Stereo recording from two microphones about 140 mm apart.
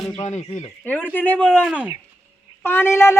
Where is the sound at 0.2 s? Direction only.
55° left (ahead or behind).